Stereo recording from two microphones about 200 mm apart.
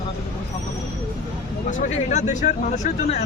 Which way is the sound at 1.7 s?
35° left (ahead or behind).